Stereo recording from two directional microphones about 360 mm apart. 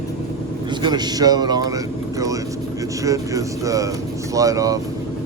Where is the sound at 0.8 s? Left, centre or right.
Centre.